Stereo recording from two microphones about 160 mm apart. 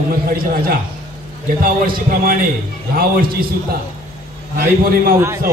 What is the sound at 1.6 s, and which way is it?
A man's voice, 65° right (ahead or behind).